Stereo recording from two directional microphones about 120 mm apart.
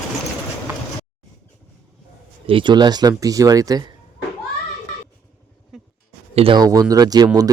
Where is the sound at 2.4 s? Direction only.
45° right (ahead or behind).